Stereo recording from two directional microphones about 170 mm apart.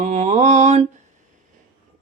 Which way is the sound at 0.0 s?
45° right (ahead or behind).